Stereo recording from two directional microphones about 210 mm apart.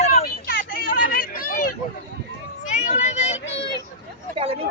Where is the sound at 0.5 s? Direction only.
45° left (ahead or behind); by 3.7 s 25° left (ahead or behind).